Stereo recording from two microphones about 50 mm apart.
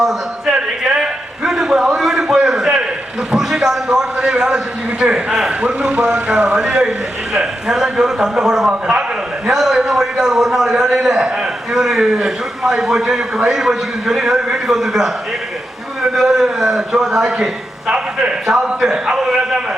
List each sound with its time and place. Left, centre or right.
0.0 s a sound: centre
2.0 s a man's voice: centre; by 6.6 s right
6.6 s a man's voice: centre
16.2 s a man's voice: centre